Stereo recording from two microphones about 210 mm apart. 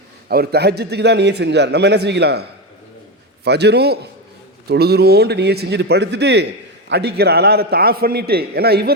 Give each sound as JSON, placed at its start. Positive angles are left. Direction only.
{"t": 0.3, "sound": "a man's voice", "side_deg": -50}